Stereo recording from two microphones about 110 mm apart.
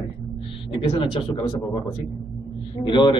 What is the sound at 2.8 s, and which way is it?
Speech, 50° left (ahead or behind).